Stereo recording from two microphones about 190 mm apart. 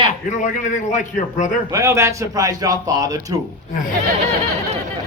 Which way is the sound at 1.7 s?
15° right (ahead or behind).